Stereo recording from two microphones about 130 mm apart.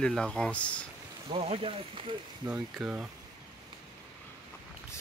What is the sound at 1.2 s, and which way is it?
Speech, 45° right (ahead or behind).